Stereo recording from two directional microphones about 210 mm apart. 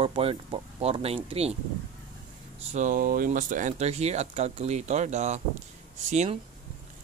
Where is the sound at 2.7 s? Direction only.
40° right (ahead or behind).